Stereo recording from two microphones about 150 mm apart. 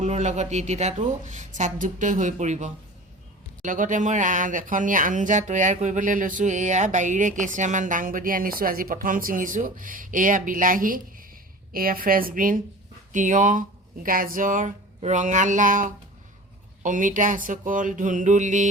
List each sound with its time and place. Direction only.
0.0 s a woman's voice: 50° right (ahead or behind)